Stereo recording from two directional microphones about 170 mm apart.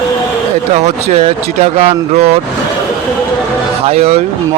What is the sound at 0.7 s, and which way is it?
Speech, 40° right (ahead or behind).